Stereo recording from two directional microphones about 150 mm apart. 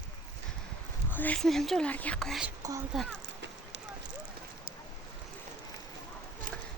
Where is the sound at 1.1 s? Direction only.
10° left (ahead or behind).